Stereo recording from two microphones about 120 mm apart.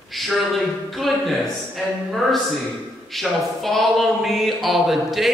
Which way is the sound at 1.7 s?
Centre (ahead or behind).